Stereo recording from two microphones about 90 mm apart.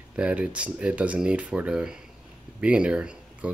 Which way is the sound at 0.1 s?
15° right (ahead or behind).